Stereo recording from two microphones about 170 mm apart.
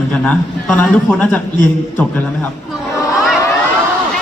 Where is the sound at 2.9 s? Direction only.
20° left (ahead or behind).